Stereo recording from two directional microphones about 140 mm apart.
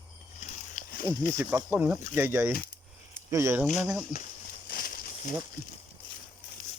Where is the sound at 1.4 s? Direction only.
20° right (ahead or behind).